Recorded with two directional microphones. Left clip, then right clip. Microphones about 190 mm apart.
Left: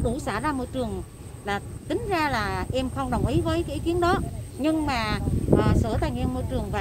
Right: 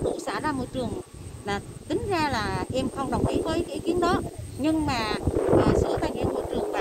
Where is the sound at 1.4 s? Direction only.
5° left (ahead or behind).